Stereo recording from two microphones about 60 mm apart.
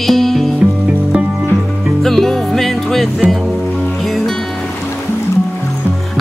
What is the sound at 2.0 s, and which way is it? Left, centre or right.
Music, centre.